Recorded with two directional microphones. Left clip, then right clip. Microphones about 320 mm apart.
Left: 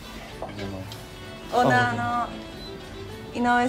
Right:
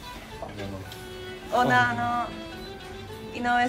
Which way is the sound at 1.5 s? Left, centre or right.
Centre.